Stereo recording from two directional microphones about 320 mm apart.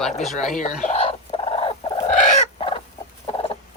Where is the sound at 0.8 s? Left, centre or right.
Centre.